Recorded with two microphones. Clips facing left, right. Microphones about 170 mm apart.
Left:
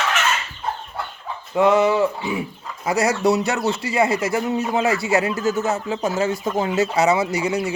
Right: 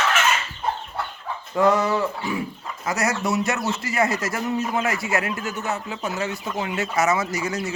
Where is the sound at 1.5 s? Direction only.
25° left (ahead or behind).